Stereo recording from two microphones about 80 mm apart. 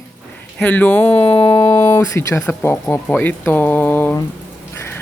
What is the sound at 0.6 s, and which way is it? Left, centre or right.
Speech, centre.